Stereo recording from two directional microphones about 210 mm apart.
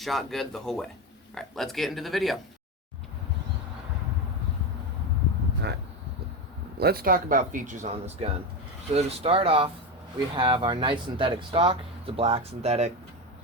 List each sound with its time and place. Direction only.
0.0 s speech: centre (ahead or behind)
6.7 s speech: 45° right (ahead or behind); by 12.9 s 30° right (ahead or behind)